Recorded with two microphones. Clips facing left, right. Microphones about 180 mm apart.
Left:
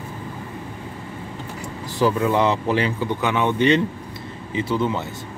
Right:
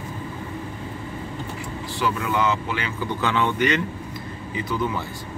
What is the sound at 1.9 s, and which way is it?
Speech, 35° left (ahead or behind).